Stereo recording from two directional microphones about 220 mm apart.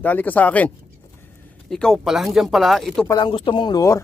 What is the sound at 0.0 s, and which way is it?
Speech, 5° left (ahead or behind).